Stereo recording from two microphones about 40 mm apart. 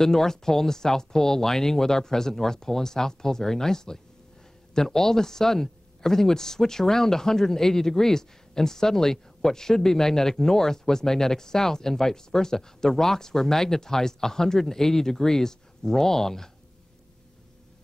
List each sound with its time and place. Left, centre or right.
0.0 s speech: centre